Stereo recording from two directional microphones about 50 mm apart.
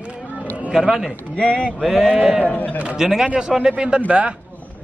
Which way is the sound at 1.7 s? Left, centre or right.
Centre.